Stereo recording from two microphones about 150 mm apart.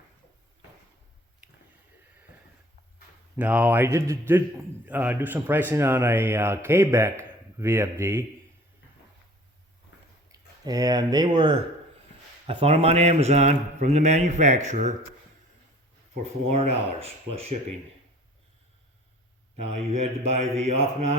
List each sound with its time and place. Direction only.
3.3 s a man's voice: 10° right (ahead or behind)
10.3 s speech: 25° right (ahead or behind); by 14.9 s 50° right (ahead or behind)
16.5 s speech: 45° right (ahead or behind)
19.6 s speech: 45° right (ahead or behind)